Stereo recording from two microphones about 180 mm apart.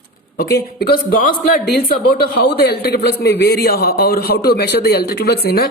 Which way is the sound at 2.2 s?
65° left (ahead or behind).